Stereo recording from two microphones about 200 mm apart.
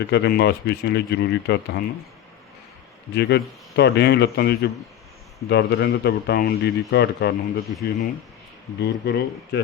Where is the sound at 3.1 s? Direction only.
55° left (ahead or behind).